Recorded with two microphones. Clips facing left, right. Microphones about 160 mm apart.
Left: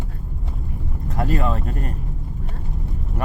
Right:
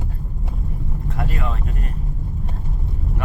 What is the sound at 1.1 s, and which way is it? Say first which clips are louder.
Vehicle: left 6 dB; 40° left (ahead or behind).